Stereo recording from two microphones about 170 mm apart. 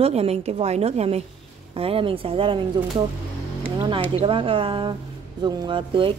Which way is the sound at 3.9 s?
30° right (ahead or behind).